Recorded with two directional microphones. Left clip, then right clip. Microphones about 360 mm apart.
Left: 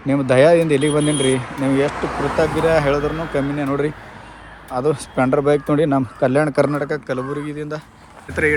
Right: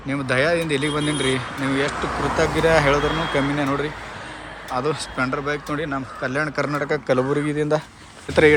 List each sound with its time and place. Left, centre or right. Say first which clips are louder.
0.1 s speech: left 7 dB; centre
2.0 s speech: left 2 dB; left
2.4 s speech: left 1 dB; centre